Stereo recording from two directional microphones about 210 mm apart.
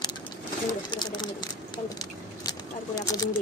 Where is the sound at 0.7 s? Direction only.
20° left (ahead or behind).